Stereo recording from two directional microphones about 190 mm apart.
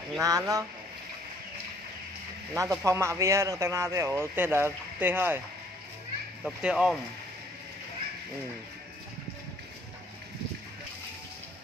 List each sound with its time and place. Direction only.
0.2 s speech: 20° right (ahead or behind)
2.5 s speech: 15° right (ahead or behind)
6.4 s speech: 5° right (ahead or behind)